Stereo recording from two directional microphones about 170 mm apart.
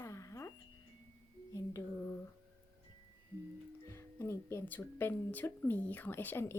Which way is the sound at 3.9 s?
15° left (ahead or behind).